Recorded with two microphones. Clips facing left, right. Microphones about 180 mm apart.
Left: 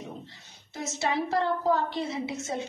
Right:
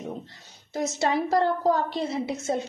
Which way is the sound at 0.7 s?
45° right (ahead or behind).